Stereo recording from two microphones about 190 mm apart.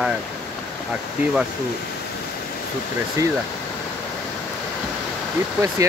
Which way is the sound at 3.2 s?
15° right (ahead or behind).